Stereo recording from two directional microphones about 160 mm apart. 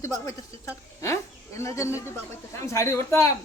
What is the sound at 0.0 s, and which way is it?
A woman's voice, 20° left (ahead or behind).